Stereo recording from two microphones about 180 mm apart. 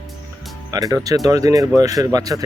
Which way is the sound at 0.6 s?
20° right (ahead or behind).